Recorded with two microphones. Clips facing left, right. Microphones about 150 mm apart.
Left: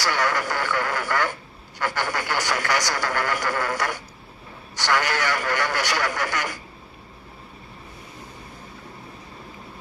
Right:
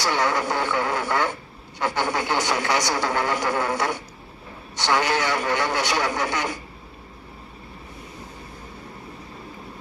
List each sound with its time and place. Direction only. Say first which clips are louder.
0.0 s speech: right 1 dB; 20° right (ahead or behind)